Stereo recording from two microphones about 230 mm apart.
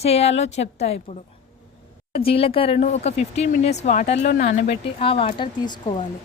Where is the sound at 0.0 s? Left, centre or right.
Left.